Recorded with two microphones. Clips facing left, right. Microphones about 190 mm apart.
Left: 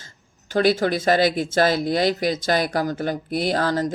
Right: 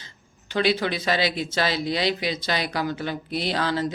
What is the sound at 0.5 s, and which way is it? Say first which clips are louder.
Speech: left 4 dB; 45° left (ahead or behind).